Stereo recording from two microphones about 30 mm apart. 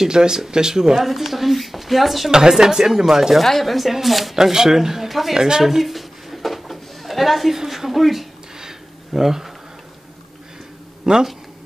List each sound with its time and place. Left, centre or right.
0.1 s speech: right
1.0 s speech: centre
2.3 s speech: centre
3.4 s speech: centre
4.4 s speech: centre
5.6 s a sound: centre
7.5 s speech: centre
8.5 s a sound: centre
11.1 s speech: right